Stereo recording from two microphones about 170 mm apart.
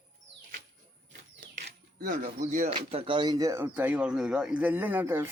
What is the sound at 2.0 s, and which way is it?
Speech, 55° right (ahead or behind).